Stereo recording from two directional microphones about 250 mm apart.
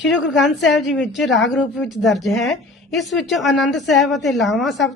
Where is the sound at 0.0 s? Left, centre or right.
Left.